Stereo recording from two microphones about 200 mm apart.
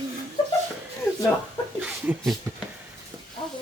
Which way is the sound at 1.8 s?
5° right (ahead or behind).